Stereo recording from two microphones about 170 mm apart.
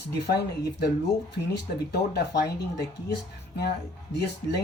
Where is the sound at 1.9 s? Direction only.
70° left (ahead or behind).